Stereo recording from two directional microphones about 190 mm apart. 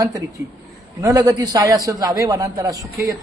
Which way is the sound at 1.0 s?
20° right (ahead or behind).